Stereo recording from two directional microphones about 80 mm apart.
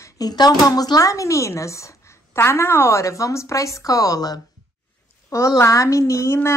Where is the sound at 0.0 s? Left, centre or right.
Left.